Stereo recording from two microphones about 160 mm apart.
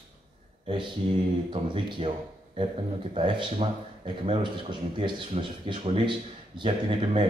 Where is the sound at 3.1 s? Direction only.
35° right (ahead or behind).